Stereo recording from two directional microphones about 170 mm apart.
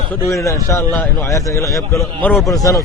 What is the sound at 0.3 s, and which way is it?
A man's voice, 20° left (ahead or behind).